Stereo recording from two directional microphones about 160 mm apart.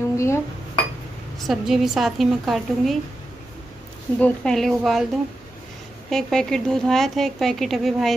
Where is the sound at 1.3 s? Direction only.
Centre (ahead or behind).